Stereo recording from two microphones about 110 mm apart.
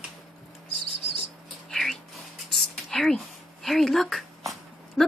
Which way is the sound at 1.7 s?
Centre (ahead or behind).